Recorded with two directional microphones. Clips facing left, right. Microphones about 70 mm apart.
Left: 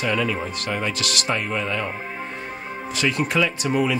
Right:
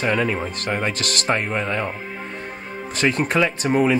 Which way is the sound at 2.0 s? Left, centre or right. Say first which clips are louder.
Left 1 dB; centre.